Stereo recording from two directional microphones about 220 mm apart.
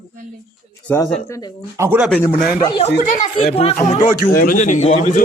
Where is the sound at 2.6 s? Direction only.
20° left (ahead or behind).